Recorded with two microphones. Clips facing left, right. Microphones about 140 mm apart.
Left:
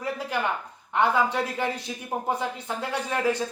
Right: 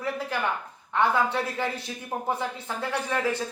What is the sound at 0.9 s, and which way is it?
Speech, 20° left (ahead or behind).